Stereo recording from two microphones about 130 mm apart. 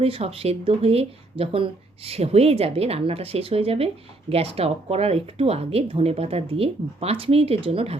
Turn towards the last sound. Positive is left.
turn(degrees=-50)  # may be behind; listen again after turning